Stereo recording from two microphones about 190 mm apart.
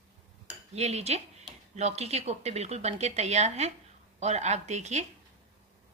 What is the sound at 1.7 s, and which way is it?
A woman's voice, 35° right (ahead or behind).